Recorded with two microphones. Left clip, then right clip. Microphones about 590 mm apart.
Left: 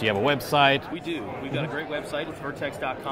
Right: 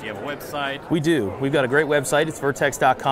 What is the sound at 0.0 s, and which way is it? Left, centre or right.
Speech, left.